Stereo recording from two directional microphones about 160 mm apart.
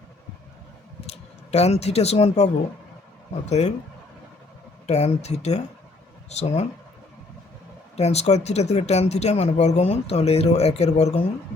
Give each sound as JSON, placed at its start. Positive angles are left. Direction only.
{"t": 1.0, "sound": "speech", "side_deg": 40}
{"t": 3.6, "sound": "speech", "side_deg": 45}
{"t": 4.9, "sound": "speech", "side_deg": 45}
{"t": 7.9, "sound": "speech", "side_deg": 45}